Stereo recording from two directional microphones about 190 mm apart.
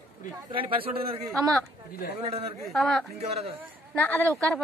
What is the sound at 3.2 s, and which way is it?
Speech, 35° right (ahead or behind).